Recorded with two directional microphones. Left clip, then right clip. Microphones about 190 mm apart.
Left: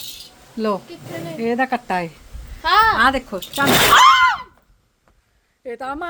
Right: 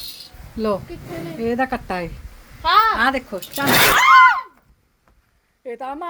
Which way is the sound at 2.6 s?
30° left (ahead or behind).